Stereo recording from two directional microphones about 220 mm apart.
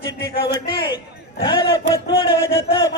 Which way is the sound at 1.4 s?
20° left (ahead or behind).